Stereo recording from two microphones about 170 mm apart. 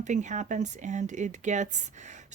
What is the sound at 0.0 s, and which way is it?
Speech, 45° right (ahead or behind).